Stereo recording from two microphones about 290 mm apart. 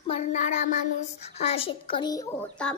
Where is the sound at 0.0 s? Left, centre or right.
Left.